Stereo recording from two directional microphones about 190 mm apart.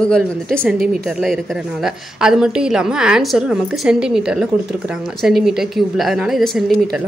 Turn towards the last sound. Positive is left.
turn(degrees=0)  # may be behind; listen again after turning